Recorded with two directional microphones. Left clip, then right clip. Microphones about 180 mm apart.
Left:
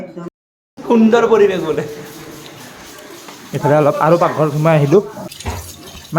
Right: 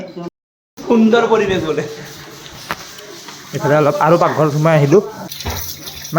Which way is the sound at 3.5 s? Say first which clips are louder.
Left 1 dB; 15° left (ahead or behind).